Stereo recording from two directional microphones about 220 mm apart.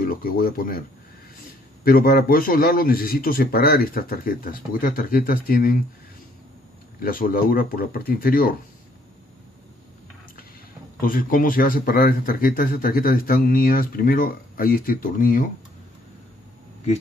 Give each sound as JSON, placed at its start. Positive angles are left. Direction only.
{"t": 0.0, "sound": "speech", "side_deg": 40}
{"t": 1.9, "sound": "speech", "side_deg": 45}
{"t": 7.0, "sound": "speech", "side_deg": 40}
{"t": 11.0, "sound": "speech", "side_deg": 40}